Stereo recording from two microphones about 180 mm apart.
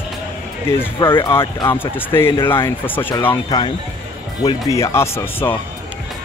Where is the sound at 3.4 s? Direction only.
25° left (ahead or behind).